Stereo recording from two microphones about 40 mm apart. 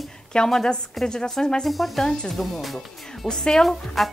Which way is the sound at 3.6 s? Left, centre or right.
Centre.